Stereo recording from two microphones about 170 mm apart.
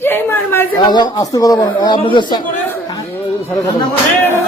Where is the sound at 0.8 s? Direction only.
25° left (ahead or behind).